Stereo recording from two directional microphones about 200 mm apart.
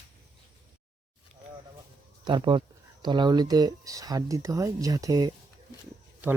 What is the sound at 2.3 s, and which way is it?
Speech, 25° right (ahead or behind).